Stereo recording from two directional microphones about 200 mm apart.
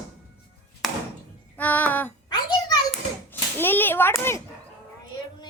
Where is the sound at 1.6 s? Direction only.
10° left (ahead or behind).